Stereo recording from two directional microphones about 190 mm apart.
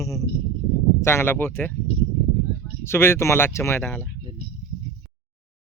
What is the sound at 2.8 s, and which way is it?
Speech, 15° left (ahead or behind).